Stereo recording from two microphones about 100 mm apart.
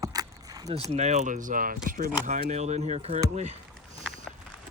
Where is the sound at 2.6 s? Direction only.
90° right.